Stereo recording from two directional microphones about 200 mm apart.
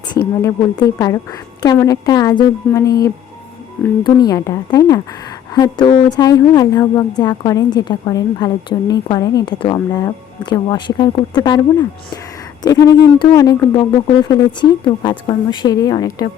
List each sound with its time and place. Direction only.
0.4 s a woman's voice: 15° left (ahead or behind)